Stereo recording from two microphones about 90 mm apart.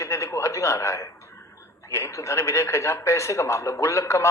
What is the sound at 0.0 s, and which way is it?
A man's voice, 35° left (ahead or behind).